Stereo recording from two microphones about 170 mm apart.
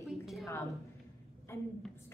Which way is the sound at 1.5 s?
15° left (ahead or behind).